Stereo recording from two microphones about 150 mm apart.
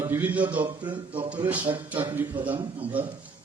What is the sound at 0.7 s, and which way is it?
Speech, 35° right (ahead or behind).